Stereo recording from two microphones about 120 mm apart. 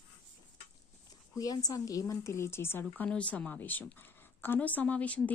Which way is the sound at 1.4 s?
30° left (ahead or behind).